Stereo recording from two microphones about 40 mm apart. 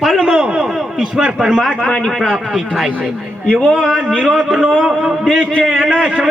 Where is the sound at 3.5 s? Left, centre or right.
Left.